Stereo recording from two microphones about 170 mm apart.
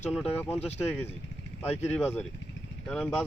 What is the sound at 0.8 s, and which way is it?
Speech, 15° left (ahead or behind).